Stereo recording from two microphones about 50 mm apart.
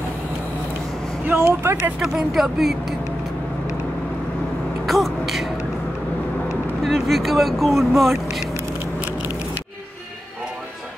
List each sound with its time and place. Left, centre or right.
1.2 s speech: right
2.0 s speech: centre
4.8 s speech: centre
6.8 s speech: centre